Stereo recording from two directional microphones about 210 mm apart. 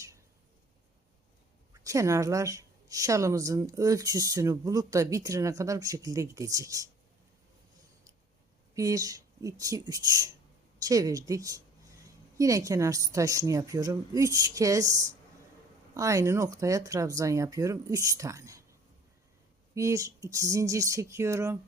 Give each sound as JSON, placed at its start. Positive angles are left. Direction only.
{"t": 1.8, "sound": "a woman's voice", "side_deg": -15}
{"t": 8.7, "sound": "a woman's voice", "side_deg": -15}